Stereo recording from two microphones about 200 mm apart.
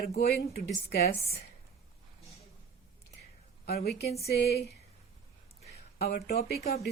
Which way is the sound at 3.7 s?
50° left (ahead or behind).